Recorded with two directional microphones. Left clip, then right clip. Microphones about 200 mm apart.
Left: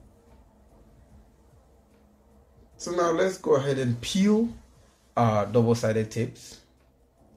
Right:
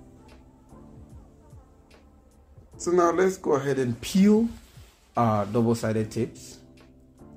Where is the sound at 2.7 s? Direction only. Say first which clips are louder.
Right 3 dB; 45° right (ahead or behind).